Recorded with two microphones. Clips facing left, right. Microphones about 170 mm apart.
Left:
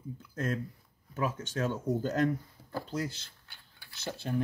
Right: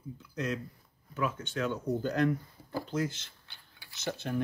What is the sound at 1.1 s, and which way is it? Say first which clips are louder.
Speech: even; 40° left (ahead or behind).